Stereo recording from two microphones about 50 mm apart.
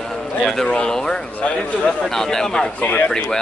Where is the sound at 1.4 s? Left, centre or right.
Left.